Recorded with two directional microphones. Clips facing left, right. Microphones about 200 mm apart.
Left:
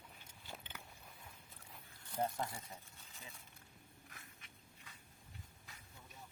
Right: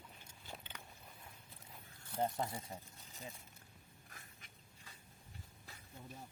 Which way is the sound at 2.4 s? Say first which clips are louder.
Right 2 dB; 25° right (ahead or behind).